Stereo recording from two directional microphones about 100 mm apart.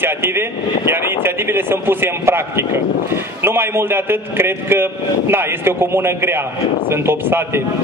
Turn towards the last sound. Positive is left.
turn(degrees=-25)  # may be behind; listen again after turning